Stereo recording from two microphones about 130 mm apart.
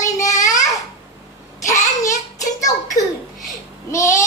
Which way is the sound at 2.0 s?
25° left (ahead or behind).